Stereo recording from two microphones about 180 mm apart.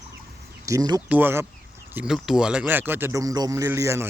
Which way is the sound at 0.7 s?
20° right (ahead or behind).